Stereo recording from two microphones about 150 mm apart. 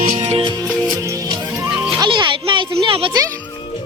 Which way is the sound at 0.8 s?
25° right (ahead or behind).